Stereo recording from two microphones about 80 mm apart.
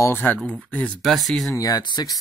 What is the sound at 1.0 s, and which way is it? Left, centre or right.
Speech, centre.